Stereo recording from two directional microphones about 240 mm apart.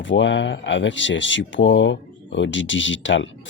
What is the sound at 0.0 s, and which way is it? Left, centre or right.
Speech, left.